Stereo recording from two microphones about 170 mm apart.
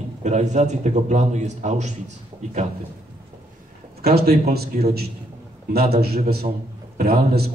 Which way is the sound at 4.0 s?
65° right (ahead or behind).